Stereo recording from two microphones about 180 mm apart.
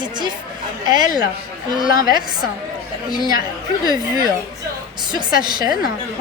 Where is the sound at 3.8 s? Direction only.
20° right (ahead or behind).